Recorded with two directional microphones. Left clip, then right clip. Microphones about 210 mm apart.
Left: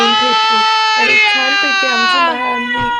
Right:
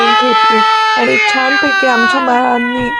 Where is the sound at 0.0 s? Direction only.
Centre (ahead or behind).